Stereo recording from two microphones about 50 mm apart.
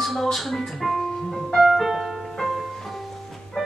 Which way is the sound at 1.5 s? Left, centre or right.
Centre.